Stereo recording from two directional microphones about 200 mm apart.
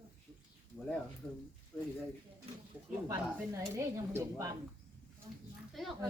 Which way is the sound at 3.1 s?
15° right (ahead or behind).